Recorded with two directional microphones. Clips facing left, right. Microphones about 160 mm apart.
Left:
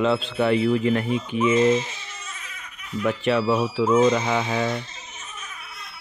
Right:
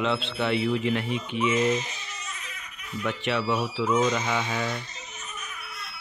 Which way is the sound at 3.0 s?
40° left (ahead or behind).